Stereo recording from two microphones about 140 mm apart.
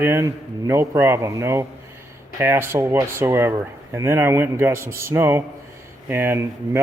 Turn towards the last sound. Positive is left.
turn(degrees=-20)  # may be behind; listen again after turning